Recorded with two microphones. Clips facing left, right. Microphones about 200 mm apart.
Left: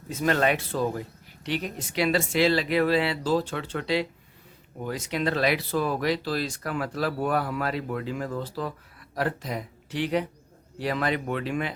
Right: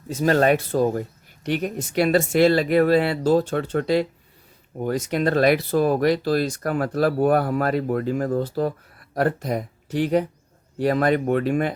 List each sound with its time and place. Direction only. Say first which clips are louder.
0.1 s speech: right 6 dB; 40° right (ahead or behind)